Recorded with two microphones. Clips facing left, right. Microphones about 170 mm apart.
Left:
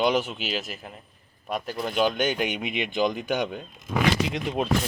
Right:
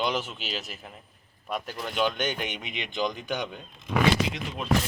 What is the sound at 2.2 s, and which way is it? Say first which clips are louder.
Speech: left 5 dB; 5° left (ahead or behind).